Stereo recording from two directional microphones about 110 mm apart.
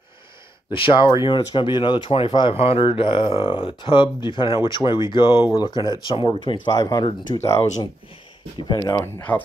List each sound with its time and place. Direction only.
0.7 s speech: 50° left (ahead or behind)
2.5 s speech: 60° left (ahead or behind)
5.6 s speech: 40° left (ahead or behind)
7.3 s speech: 90° left
8.6 s speech: 35° left (ahead or behind)
9.0 s speech: 15° left (ahead or behind)